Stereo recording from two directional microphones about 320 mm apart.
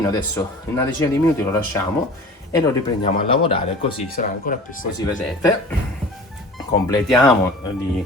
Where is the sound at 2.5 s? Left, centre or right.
Centre.